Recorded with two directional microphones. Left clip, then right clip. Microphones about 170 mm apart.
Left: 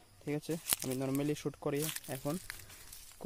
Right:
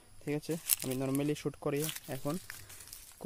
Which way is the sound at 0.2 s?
5° right (ahead or behind).